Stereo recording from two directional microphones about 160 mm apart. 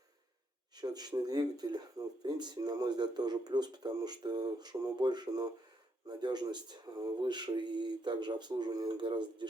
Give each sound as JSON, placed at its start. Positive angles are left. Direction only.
{"t": 0.8, "sound": "speech", "side_deg": -25}